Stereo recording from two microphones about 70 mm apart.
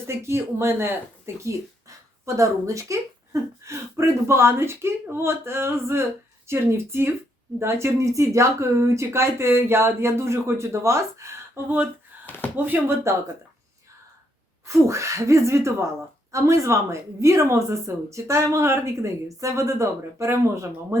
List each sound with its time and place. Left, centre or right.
0.1 s speech: right
12.5 s speech: right
13.1 s speech: right
14.7 s speech: right